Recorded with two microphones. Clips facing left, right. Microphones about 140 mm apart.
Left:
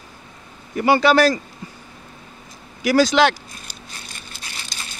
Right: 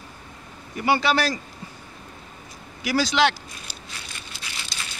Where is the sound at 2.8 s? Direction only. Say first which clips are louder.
Left 6 dB; 45° left (ahead or behind).